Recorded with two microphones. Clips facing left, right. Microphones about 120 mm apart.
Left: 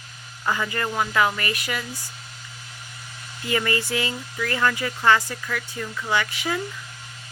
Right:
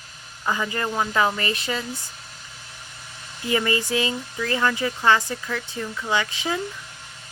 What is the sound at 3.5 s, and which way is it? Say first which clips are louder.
Speech: right 2 dB; 20° right (ahead or behind).